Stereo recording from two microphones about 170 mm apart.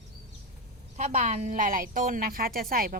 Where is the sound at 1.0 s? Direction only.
45° right (ahead or behind).